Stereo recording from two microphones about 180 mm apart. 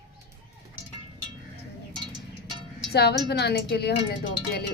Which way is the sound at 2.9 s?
65° left (ahead or behind).